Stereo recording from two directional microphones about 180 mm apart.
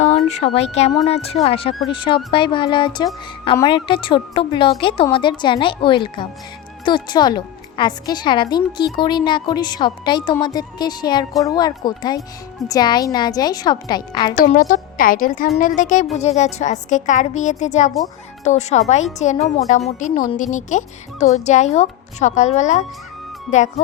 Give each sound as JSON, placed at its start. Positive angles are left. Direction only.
{"t": 0.3, "sound": "a woman's voice", "side_deg": 35}
{"t": 14.3, "sound": "a woman's voice", "side_deg": 50}